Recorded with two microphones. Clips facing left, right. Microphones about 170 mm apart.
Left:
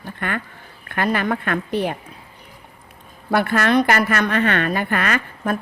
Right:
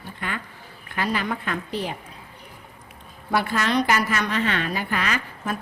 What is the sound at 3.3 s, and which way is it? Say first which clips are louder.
A woman's voice: left 5 dB; 60° left (ahead or behind).